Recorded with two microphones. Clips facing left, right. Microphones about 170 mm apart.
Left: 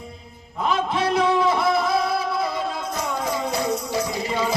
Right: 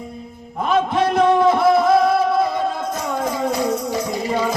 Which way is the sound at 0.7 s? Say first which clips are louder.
Right 5 dB; 50° right (ahead or behind).